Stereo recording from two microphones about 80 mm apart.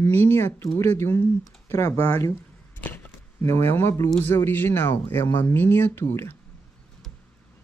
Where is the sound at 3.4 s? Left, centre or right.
Left.